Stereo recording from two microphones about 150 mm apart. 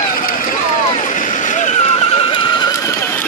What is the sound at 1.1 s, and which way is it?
Neigh, 55° left (ahead or behind).